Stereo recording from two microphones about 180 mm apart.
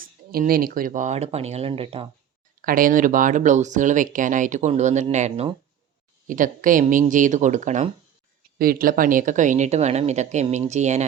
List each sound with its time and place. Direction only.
0.0 s speech: 55° right (ahead or behind); by 2.0 s 30° right (ahead or behind)
2.6 s speech: 50° right (ahead or behind)
8.5 s speech: 55° right (ahead or behind)